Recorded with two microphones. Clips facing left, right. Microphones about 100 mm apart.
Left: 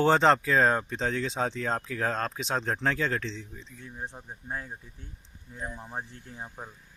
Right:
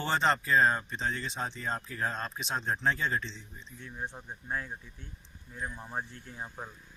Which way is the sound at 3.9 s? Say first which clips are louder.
Even; 25° left (ahead or behind).